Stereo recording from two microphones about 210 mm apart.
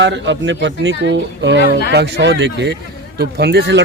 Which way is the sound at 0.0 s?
60° right (ahead or behind).